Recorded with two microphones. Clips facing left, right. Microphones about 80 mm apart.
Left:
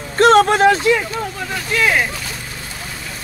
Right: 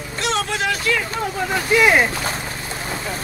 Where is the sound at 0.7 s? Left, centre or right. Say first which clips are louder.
Left 7 dB; left.